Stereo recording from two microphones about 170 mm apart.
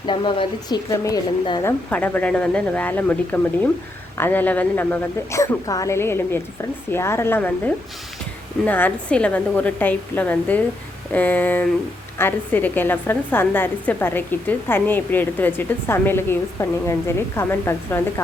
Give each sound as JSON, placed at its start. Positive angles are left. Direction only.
{"t": 0.0, "sound": "speech", "side_deg": 30}
{"t": 1.9, "sound": "a woman's voice", "side_deg": 10}